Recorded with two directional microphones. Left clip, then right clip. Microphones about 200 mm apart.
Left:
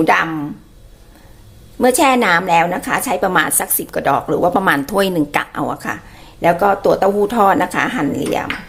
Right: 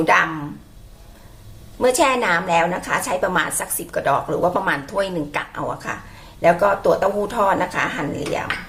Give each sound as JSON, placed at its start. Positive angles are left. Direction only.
{"t": 0.0, "sound": "a woman's voice", "side_deg": 40}
{"t": 1.8, "sound": "a woman's voice", "side_deg": 40}